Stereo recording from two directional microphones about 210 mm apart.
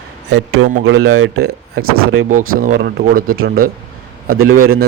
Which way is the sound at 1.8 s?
85° right.